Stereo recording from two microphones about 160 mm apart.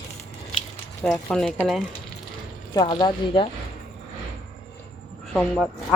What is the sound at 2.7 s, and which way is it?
Speech, 30° left (ahead or behind).